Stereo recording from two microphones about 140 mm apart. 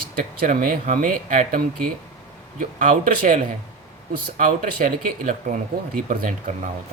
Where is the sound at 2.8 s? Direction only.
70° right (ahead or behind).